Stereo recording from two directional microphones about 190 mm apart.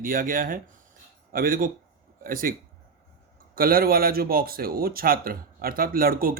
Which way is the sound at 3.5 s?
50° right (ahead or behind).